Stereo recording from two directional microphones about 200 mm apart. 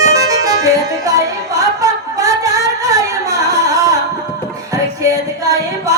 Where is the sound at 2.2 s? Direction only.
15° right (ahead or behind).